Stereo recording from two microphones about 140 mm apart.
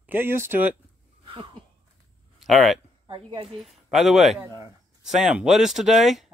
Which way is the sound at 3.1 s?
35° right (ahead or behind).